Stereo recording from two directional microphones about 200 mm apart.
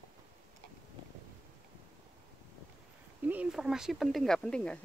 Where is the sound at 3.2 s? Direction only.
5° right (ahead or behind).